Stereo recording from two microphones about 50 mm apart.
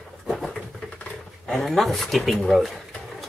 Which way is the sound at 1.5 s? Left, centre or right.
Centre.